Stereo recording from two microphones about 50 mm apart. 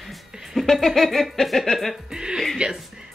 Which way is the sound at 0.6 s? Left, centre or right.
Centre.